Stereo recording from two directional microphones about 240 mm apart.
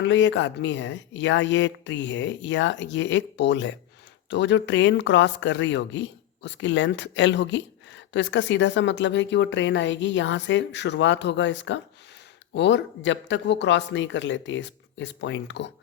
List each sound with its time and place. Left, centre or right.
0.0 s speech: left